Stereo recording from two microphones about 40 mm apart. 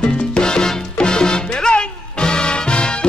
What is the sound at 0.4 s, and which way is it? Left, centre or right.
Salsa music, centre.